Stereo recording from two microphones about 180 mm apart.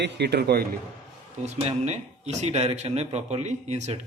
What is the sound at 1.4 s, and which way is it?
Speech, 40° right (ahead or behind).